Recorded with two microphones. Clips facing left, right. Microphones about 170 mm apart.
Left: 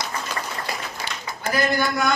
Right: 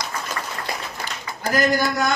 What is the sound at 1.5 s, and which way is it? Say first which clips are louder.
Speech: right 2 dB; 40° right (ahead or behind).